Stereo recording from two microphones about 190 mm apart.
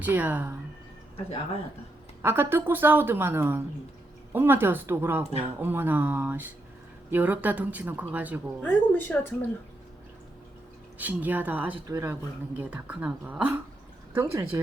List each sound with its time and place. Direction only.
0.0 s a woman's voice: 10° right (ahead or behind)
2.2 s a woman's voice: 10° right (ahead or behind)
8.6 s a woman's voice: 10° left (ahead or behind)
10.9 s a woman's voice: 10° right (ahead or behind)
12.5 s a woman's voice: 5° right (ahead or behind)